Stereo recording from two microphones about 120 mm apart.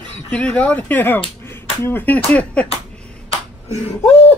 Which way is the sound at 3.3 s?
60° left (ahead or behind).